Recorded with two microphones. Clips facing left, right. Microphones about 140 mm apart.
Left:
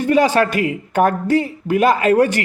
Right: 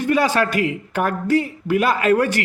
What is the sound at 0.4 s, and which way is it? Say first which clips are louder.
Speech: left 3 dB; 40° left (ahead or behind).